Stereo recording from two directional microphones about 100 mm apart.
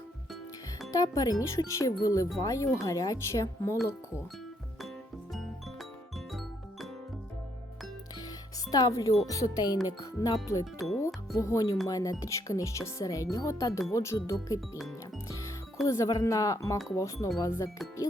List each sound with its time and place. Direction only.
0.9 s speech: 35° left (ahead or behind)
6.1 s music: centre (ahead or behind)
8.7 s speech: 35° left (ahead or behind)
14.8 s music: centre (ahead or behind)
15.9 s speech: 30° left (ahead or behind)
17.4 s music: 30° left (ahead or behind)